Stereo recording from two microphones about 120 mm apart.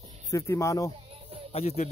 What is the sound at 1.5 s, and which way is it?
Speech, 65° left (ahead or behind).